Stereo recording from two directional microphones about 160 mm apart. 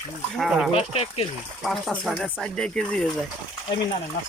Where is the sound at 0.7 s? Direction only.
40° left (ahead or behind).